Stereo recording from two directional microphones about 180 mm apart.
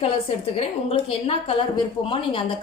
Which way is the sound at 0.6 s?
30° left (ahead or behind).